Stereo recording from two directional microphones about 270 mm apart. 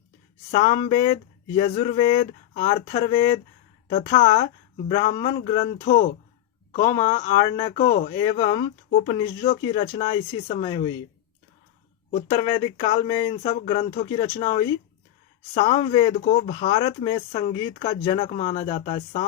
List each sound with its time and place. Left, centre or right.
0.5 s speech: centre
6.7 s speech: centre
12.1 s speech: centre